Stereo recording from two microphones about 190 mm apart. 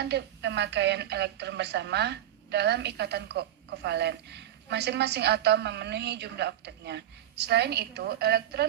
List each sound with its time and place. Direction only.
0.0 s a woman's voice: 65° right (ahead or behind)